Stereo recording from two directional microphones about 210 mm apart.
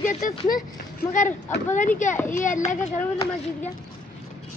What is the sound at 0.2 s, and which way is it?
Speech, 40° left (ahead or behind).